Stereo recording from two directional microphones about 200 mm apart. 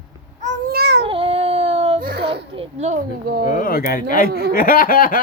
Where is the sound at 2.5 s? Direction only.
30° right (ahead or behind).